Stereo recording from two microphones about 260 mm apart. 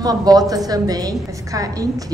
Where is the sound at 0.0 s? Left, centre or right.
Centre.